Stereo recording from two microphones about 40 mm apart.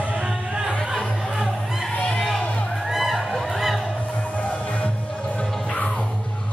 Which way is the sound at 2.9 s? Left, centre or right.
Centre.